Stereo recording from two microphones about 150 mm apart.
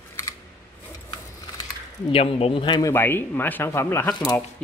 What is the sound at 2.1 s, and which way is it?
Speech, 40° left (ahead or behind).